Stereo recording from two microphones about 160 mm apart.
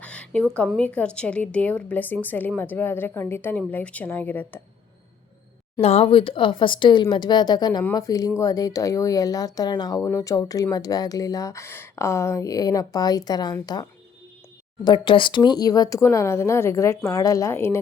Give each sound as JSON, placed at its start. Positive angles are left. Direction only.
{"t": 0.0, "sound": "a sound", "side_deg": 5}
{"t": 0.7, "sound": "a woman's voice", "side_deg": 10}
{"t": 5.8, "sound": "speech", "side_deg": 40}
{"t": 14.8, "sound": "speech", "side_deg": 30}